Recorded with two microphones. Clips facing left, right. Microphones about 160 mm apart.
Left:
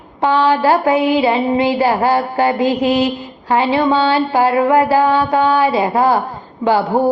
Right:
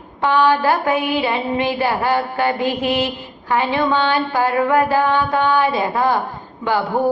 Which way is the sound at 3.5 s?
30° left (ahead or behind).